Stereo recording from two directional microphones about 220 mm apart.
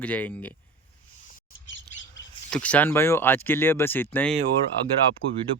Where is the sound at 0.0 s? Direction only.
5° left (ahead or behind).